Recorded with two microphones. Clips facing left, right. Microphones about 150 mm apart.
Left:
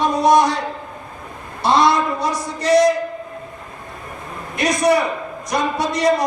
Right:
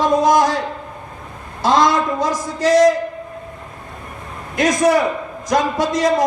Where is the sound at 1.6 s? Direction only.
90° right.